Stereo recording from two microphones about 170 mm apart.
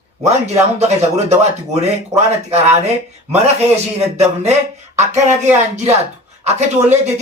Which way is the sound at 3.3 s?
40° right (ahead or behind).